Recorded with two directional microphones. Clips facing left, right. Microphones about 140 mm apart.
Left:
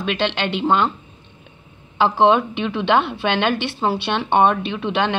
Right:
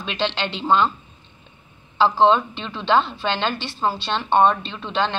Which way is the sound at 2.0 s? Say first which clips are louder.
Left 1 dB; 15° left (ahead or behind).